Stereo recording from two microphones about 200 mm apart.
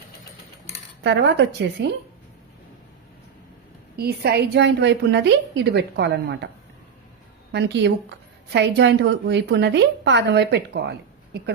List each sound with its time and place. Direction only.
1.0 s a woman's voice: 60° right (ahead or behind)
3.9 s a woman's voice: 55° right (ahead or behind)
7.5 s a woman's voice: 60° right (ahead or behind)